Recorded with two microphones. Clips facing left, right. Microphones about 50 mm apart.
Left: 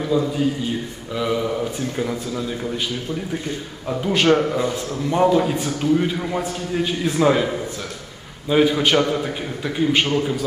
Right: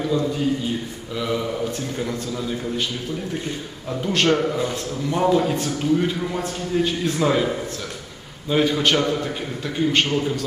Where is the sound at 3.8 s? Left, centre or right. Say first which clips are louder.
Left 3 dB; centre.